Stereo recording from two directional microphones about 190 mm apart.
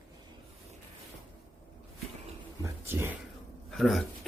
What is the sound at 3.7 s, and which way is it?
Speech, centre (ahead or behind).